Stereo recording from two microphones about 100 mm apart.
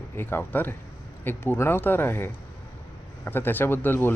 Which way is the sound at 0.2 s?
20° left (ahead or behind).